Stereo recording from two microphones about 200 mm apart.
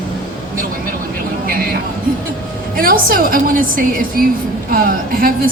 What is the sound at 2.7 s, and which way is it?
A woman's voice, 45° right (ahead or behind).